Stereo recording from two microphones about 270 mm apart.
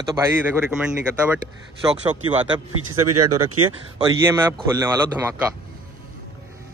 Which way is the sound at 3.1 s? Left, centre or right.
Right.